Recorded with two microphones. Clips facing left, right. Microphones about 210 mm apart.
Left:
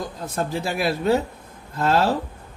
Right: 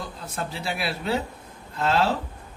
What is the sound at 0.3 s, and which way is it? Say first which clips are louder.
Speech: left 6 dB; 45° left (ahead or behind).